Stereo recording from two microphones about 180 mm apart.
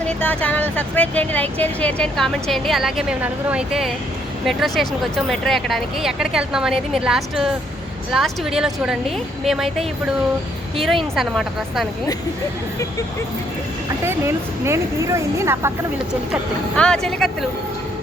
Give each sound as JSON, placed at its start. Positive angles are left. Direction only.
{"t": 0.0, "sound": "speech", "side_deg": 10}
{"t": 10.8, "sound": "speech", "side_deg": 0}
{"t": 14.0, "sound": "speech", "side_deg": -15}
{"t": 16.7, "sound": "speech", "side_deg": 5}